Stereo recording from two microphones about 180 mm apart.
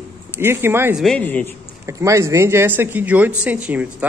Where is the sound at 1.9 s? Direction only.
15° right (ahead or behind).